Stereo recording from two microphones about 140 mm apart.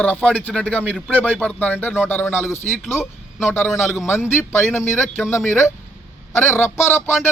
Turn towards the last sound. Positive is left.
turn(degrees=15)  # may be behind; listen again after turning